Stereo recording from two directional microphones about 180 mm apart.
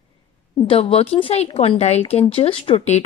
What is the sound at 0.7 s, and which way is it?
Speech, 30° left (ahead or behind).